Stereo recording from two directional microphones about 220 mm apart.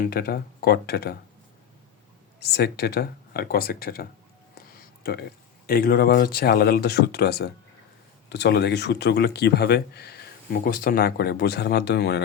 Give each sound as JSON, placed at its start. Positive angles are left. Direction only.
{"t": 0.0, "sound": "speech", "side_deg": 45}
{"t": 2.4, "sound": "speech", "side_deg": 45}
{"t": 4.7, "sound": "a sound", "side_deg": 45}
{"t": 5.6, "sound": "speech", "side_deg": 45}